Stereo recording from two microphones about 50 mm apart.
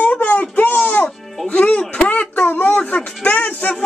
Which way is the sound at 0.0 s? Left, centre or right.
Left.